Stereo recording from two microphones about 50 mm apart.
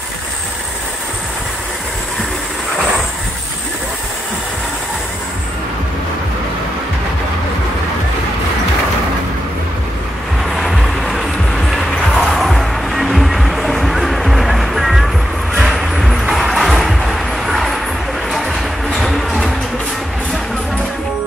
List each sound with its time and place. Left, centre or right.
10.5 s vehicle: centre
12.5 s music: centre
18.3 s a sound: centre
18.9 s music: centre